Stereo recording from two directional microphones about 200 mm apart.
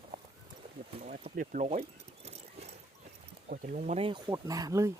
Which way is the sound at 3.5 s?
40° right (ahead or behind).